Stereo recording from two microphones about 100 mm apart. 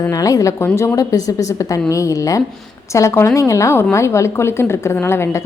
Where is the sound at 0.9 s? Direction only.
35° left (ahead or behind).